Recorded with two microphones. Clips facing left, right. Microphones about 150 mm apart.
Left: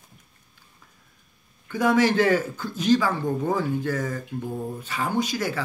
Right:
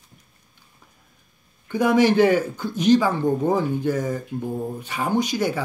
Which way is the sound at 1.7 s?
15° right (ahead or behind).